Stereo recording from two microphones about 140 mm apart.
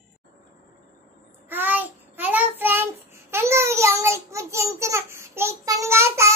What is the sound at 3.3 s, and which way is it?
A child's voice, 20° right (ahead or behind).